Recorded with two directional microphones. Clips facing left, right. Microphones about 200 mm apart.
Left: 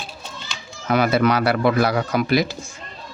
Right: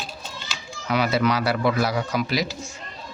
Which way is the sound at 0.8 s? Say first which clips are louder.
Left 4 dB; 50° left (ahead or behind).